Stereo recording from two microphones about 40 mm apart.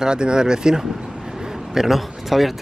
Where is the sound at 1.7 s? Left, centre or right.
Centre.